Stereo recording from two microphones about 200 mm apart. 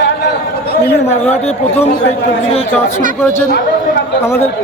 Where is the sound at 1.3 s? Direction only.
30° left (ahead or behind).